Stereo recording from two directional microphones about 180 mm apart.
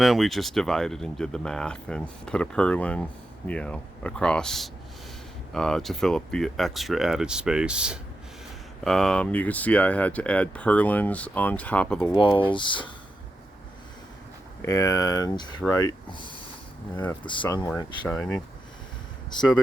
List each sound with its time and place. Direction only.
0.0 s speech: centre (ahead or behind)
12.1 s speech: 30° left (ahead or behind)
14.6 s speech: 20° left (ahead or behind)
16.9 s speech: 10° left (ahead or behind)
17.2 s speech: 25° left (ahead or behind)